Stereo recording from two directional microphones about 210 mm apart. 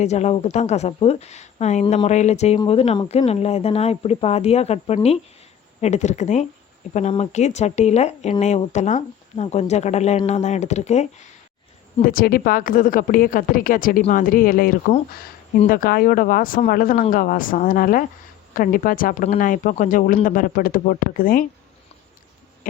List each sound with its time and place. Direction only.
0.0 s speech: 30° left (ahead or behind)